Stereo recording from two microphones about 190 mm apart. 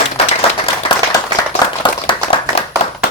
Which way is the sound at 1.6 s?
25° left (ahead or behind).